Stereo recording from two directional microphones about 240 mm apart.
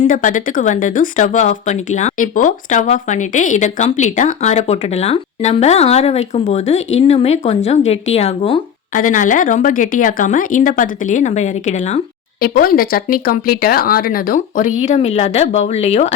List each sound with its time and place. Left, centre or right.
0.0 s speech: left